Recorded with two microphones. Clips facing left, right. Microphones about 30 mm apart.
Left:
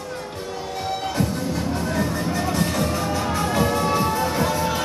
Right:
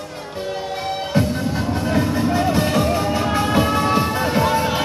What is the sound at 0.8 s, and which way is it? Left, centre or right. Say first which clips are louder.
Music: right 2 dB; right.